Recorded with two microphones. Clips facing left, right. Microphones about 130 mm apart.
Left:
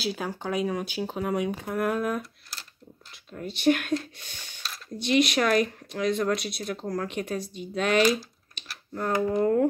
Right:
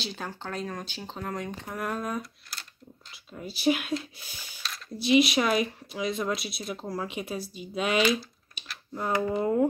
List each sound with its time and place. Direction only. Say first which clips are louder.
0.0 s speech: left 6 dB; 5° left (ahead or behind)
8.0 s speech: left 2 dB; 40° left (ahead or behind)
8.6 s typing: even; 5° right (ahead or behind)
8.9 s speech: left 2 dB; 10° right (ahead or behind)